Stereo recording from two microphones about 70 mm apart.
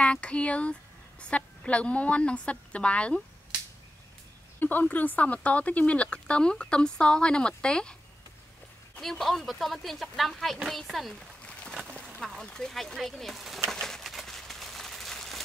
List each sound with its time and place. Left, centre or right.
0.0 s speech: centre
4.6 s speech: left
9.0 s speech: centre
12.2 s speech: centre
13.7 s a sound: centre